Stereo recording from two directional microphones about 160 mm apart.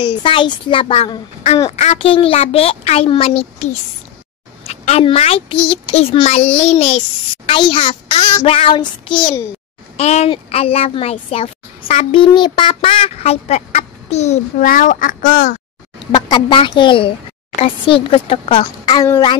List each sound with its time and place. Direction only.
0.0 s a woman's voice: 30° left (ahead or behind)
14.7 s speech: 55° left (ahead or behind)
16.1 s a woman's voice: 25° left (ahead or behind)
18.9 s a woman's voice: 25° left (ahead or behind)